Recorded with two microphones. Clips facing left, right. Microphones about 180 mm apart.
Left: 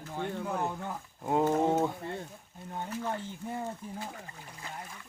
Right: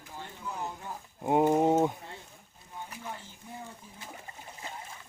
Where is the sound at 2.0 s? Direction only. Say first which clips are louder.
Left 9 dB; 60° left (ahead or behind).